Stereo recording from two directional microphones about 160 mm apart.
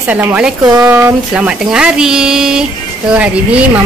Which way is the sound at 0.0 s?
10° right (ahead or behind).